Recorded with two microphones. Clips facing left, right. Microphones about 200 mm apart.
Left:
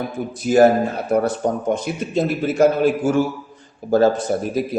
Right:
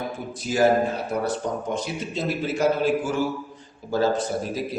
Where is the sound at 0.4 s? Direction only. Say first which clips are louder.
Left 8 dB; 50° left (ahead or behind).